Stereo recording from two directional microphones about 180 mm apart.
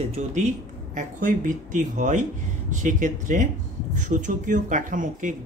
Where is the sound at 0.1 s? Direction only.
40° right (ahead or behind).